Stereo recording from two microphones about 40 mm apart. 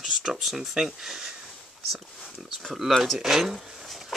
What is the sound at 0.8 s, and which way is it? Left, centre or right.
Speech, centre.